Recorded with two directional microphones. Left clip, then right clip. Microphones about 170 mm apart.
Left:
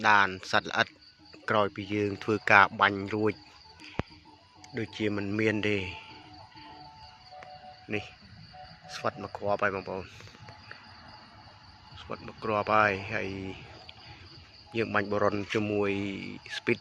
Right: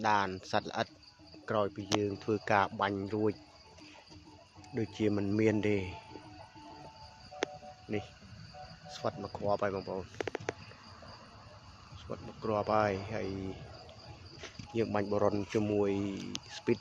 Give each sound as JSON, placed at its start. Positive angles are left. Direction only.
{"t": 0.0, "sound": "speech", "side_deg": 0}
{"t": 1.5, "sound": "speech", "side_deg": 20}
{"t": 4.7, "sound": "speech", "side_deg": -20}
{"t": 7.9, "sound": "speech", "side_deg": 5}
{"t": 9.2, "sound": "speech", "side_deg": 25}
{"t": 9.5, "sound": "speech", "side_deg": 10}
{"t": 12.1, "sound": "speech", "side_deg": 5}
{"t": 14.7, "sound": "speech", "side_deg": 0}